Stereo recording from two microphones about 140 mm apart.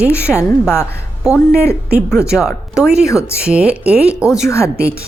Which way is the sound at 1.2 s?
5° right (ahead or behind).